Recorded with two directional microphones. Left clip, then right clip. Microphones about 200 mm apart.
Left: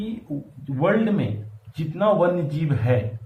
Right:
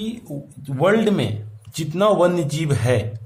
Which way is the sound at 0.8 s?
65° right (ahead or behind).